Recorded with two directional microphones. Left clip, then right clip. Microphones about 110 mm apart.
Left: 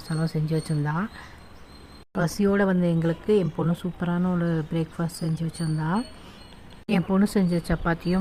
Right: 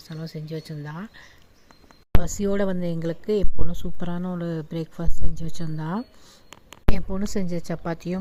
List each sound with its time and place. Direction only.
0.1 s speech: 10° right (ahead or behind)
0.9 s speech: 20° right (ahead or behind)
2.4 s speech: 45° right (ahead or behind)
5.3 s speech: 5° left (ahead or behind)
5.5 s speech: 65° right (ahead or behind)
6.9 s speech: 35° right (ahead or behind)